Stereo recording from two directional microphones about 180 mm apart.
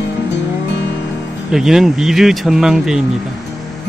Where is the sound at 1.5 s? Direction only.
Centre (ahead or behind).